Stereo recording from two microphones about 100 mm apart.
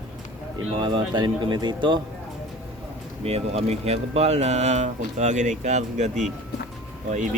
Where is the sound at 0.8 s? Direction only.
55° right (ahead or behind).